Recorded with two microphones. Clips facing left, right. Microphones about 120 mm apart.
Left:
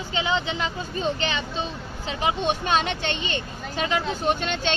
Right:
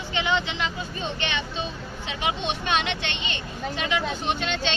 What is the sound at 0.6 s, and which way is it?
Speech, 35° left (ahead or behind).